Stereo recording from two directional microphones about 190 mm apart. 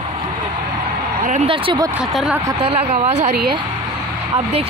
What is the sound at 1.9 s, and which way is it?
Speech, 5° right (ahead or behind).